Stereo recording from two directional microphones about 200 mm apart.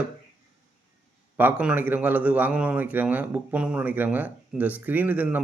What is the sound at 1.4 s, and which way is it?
Speech, 5° right (ahead or behind).